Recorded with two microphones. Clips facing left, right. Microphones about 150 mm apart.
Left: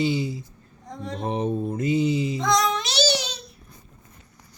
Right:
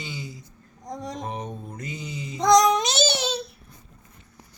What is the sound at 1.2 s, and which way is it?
A man's voice, 30° left (ahead or behind).